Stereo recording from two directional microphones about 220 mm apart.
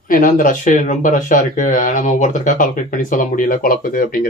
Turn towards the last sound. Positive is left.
turn(degrees=40)  # may be behind; listen again after turning